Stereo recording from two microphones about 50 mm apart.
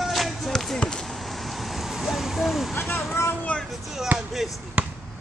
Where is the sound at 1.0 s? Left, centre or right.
Centre.